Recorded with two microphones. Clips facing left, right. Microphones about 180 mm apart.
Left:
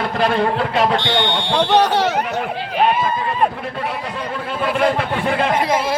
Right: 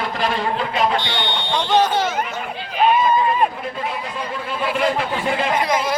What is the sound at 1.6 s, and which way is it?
Speech, 70° left (ahead or behind).